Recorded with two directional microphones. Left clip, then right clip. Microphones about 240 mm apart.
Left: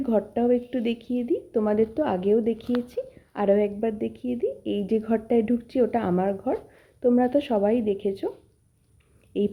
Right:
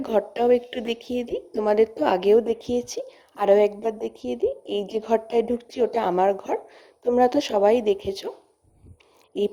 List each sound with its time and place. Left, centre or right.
0.0 s a woman's voice: right
9.3 s a woman's voice: right